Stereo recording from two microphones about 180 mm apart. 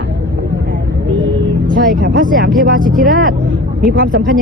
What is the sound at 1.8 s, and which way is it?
Speech, 70° right (ahead or behind).